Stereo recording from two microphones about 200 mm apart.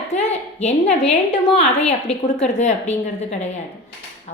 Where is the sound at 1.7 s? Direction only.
35° left (ahead or behind).